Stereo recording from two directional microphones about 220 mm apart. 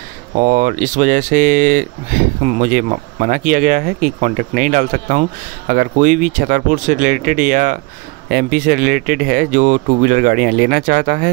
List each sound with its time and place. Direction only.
0.4 s speech: 35° right (ahead or behind)